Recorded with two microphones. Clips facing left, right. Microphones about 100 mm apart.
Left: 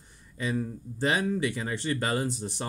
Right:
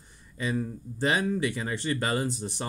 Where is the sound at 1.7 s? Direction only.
20° right (ahead or behind).